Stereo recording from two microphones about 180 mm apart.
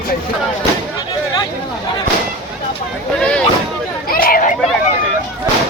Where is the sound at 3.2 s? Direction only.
5° left (ahead or behind).